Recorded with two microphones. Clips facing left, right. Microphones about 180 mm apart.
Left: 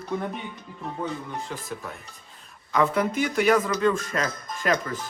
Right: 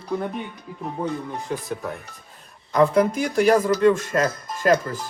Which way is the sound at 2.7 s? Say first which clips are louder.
Right 5 dB; 35° right (ahead or behind).